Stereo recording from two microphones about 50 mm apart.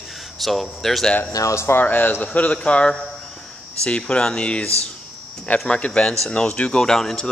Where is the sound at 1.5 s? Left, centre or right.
Left.